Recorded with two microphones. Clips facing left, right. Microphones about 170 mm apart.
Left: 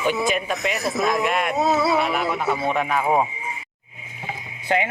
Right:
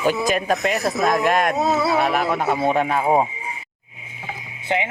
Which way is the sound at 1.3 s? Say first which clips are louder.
Right 4 dB; 40° right (ahead or behind).